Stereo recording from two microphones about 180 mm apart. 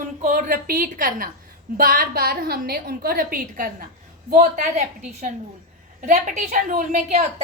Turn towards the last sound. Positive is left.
turn(degrees=-40)  # may be behind; listen again after turning